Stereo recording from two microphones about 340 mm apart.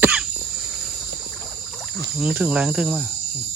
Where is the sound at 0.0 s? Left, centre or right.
Centre.